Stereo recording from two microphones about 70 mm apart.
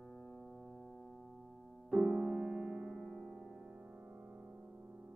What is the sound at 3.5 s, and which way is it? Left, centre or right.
Music, centre.